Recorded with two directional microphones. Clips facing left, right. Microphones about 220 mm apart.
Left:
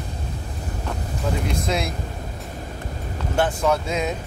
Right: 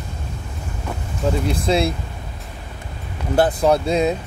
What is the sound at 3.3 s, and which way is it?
Speech, 35° right (ahead or behind).